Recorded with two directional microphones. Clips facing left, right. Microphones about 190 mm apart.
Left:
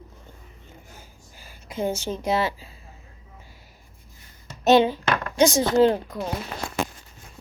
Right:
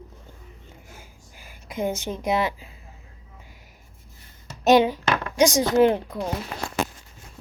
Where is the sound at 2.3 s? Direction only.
15° right (ahead or behind).